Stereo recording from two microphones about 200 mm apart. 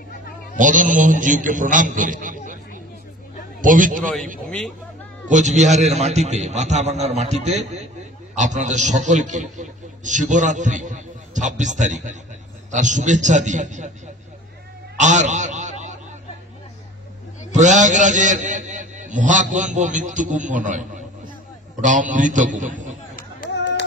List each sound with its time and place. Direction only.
0.6 s a man's voice: 40° right (ahead or behind)
4.5 s speech: 5° left (ahead or behind)
5.3 s a man's voice: 35° right (ahead or behind)
15.0 s a sound: 35° right (ahead or behind)
17.5 s a man's voice: 35° right (ahead or behind)